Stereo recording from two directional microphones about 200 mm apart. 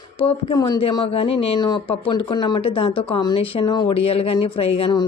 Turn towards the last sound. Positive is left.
turn(degrees=25)  # may be behind; listen again after turning